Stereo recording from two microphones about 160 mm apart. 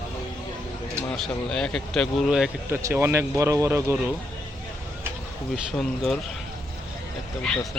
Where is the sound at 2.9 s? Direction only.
15° right (ahead or behind).